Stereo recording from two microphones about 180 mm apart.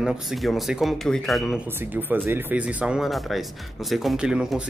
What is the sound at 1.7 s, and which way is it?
Speech, 10° right (ahead or behind).